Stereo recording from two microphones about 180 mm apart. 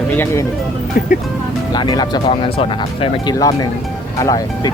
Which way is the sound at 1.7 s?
25° left (ahead or behind).